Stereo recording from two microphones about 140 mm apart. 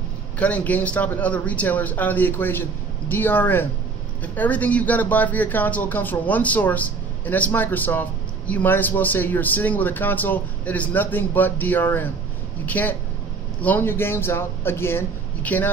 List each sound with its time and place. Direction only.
0.4 s speech: 10° left (ahead or behind)